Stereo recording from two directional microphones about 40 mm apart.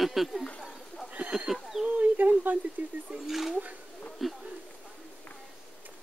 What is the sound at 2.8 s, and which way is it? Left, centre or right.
Speech, right.